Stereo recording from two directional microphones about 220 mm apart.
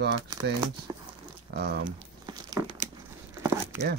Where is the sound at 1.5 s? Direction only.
50° right (ahead or behind).